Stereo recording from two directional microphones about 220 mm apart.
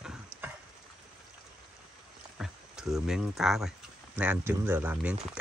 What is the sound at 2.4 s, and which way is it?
A man's voice, centre (ahead or behind).